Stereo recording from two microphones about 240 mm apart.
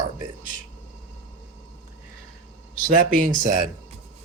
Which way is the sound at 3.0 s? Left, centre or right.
Right.